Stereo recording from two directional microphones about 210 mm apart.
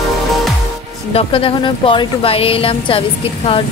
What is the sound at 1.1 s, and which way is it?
Speech, 25° left (ahead or behind).